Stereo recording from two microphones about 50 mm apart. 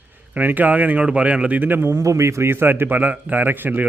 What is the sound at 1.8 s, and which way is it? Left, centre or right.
A man's voice, right.